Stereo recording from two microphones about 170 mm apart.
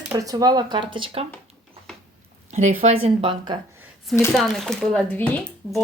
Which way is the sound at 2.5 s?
45° right (ahead or behind).